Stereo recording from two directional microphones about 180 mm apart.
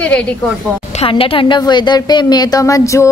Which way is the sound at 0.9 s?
30° left (ahead or behind).